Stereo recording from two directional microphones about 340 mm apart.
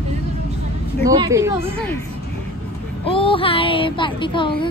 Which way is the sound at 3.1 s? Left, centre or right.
Centre.